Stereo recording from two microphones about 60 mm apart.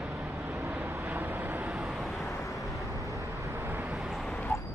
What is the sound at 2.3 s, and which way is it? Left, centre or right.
Vehicle, left.